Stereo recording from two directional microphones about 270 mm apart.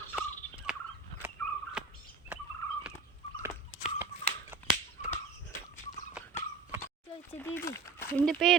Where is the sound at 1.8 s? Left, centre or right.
Centre.